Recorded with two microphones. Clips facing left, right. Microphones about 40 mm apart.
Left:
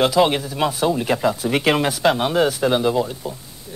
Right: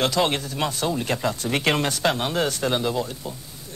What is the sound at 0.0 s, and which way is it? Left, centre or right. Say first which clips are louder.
Speech: left 6 dB; centre.